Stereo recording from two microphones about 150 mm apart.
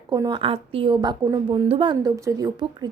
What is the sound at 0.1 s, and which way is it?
Speech, 30° right (ahead or behind).